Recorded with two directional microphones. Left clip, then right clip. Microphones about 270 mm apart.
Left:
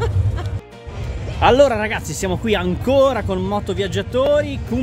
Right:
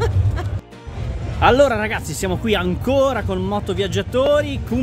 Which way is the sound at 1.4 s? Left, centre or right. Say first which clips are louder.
Left 1 dB; centre.